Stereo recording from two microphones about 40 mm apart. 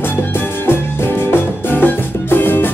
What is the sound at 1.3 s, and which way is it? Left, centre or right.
Music, left.